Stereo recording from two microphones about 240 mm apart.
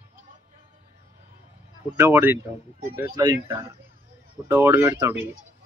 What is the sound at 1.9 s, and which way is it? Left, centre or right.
Speech, centre.